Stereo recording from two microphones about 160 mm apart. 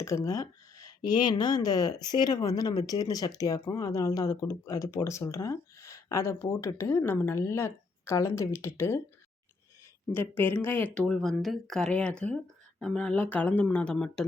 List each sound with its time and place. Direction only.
0.0 s speech: 20° left (ahead or behind)
10.1 s speech: 10° left (ahead or behind)
11.0 s speech: centre (ahead or behind)